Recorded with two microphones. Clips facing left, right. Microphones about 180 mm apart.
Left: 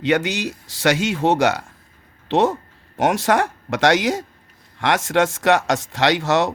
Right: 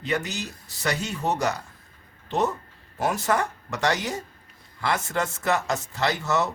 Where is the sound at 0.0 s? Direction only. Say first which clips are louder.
Left 9 dB; 90° left.